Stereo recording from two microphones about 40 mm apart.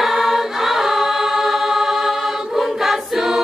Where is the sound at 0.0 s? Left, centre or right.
Centre.